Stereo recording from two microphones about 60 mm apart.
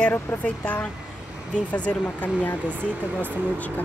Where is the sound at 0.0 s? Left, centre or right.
Left.